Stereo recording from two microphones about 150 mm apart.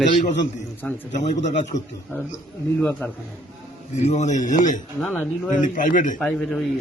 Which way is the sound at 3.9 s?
45° left (ahead or behind).